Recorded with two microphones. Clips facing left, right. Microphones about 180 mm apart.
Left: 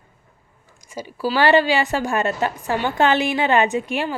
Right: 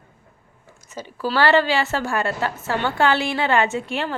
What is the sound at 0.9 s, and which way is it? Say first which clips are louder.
A woman's voice: left 2 dB; 10° left (ahead or behind).